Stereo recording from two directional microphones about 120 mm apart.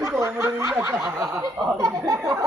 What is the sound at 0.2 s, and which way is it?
Snicker, 20° right (ahead or behind).